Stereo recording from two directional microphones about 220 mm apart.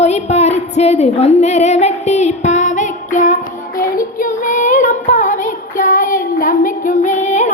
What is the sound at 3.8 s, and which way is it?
Child singing, 40° left (ahead or behind).